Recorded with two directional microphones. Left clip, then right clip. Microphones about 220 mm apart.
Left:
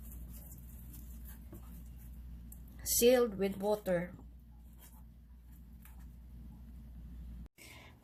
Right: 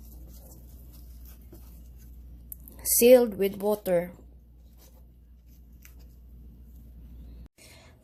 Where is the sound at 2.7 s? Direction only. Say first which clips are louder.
Right 10 dB; 50° right (ahead or behind).